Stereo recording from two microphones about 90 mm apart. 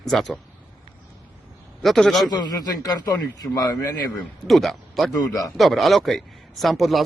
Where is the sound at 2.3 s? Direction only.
50° left (ahead or behind).